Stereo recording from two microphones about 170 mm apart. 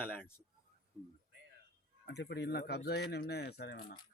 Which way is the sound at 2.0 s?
75° left (ahead or behind).